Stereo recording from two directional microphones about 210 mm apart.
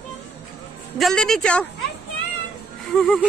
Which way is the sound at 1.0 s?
Centre (ahead or behind).